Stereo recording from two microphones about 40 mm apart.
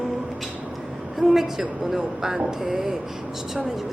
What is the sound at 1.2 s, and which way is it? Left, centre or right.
Speech, centre.